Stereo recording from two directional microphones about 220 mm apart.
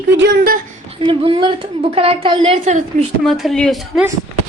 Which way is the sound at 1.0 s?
20° right (ahead or behind).